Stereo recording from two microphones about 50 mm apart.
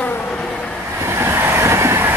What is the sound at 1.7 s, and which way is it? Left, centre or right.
Train, right.